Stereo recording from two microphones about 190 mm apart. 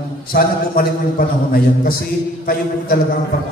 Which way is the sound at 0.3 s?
50° left (ahead or behind).